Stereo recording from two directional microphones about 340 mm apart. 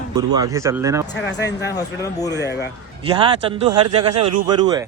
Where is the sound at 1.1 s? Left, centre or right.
Left.